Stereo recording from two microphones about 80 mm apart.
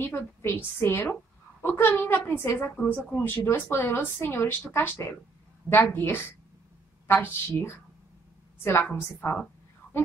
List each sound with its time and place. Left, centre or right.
0.1 s speech: left